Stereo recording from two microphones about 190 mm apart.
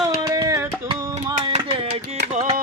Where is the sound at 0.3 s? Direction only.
15° right (ahead or behind).